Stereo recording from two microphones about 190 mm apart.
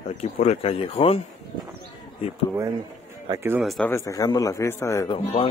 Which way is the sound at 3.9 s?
15° left (ahead or behind).